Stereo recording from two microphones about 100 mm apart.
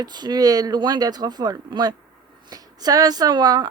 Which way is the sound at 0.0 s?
45° right (ahead or behind).